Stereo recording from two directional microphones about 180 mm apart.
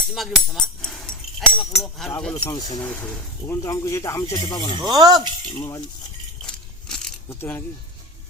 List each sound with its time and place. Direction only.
0.1 s speech: centre (ahead or behind)
2.3 s speech: 20° left (ahead or behind)
4.8 s speech: 20° right (ahead or behind)
5.5 s cutlery: 20° left (ahead or behind)
6.4 s a sound: 5° left (ahead or behind)
7.3 s speech: 10° left (ahead or behind)